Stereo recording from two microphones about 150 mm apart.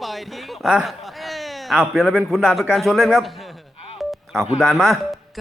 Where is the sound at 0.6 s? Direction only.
Centre (ahead or behind).